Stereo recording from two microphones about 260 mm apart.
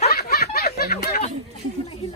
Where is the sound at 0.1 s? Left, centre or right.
Left.